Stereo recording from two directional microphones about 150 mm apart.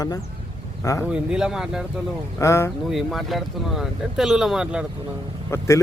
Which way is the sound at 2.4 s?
20° left (ahead or behind).